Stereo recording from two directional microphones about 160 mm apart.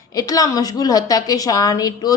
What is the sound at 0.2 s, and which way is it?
A woman's voice, 20° left (ahead or behind).